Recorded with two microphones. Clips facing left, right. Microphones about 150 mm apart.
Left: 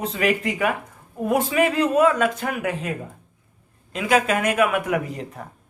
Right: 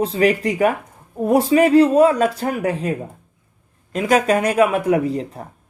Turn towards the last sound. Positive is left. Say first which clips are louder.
# right 6 dB
turn(degrees=-35)  # may be behind; listen again after turning